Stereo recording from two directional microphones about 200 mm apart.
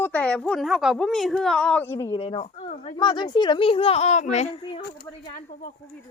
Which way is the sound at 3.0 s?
25° left (ahead or behind).